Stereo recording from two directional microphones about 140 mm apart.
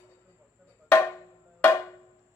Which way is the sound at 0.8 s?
15° left (ahead or behind).